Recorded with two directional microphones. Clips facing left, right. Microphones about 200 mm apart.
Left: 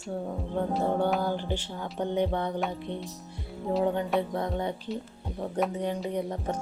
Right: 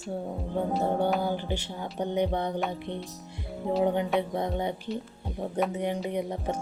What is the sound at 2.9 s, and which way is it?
Speech, 10° left (ahead or behind).